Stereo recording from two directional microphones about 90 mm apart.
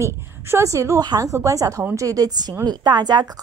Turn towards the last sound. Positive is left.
turn(degrees=-50)  # may be behind; listen again after turning